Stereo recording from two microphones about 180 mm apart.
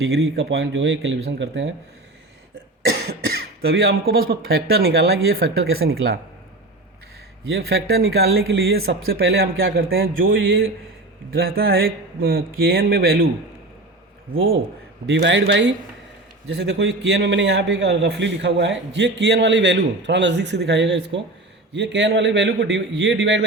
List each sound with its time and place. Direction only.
0.0 s speech: 65° right (ahead or behind); by 1.7 s 85° right
3.1 s speech: 60° right (ahead or behind)
7.5 s speech: 65° right (ahead or behind); by 10.7 s 90° right
11.3 s speech: 55° right (ahead or behind)
14.3 s a man's voice: 90° right
18.9 s a man's voice: 70° right (ahead or behind)